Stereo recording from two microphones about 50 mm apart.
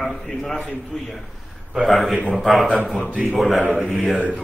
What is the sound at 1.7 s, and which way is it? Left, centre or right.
Speech, centre.